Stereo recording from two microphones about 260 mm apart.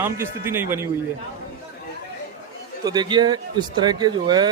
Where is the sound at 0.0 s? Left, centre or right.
Centre.